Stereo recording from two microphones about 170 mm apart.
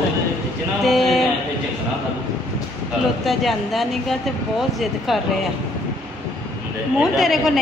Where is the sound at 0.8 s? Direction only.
Centre (ahead or behind).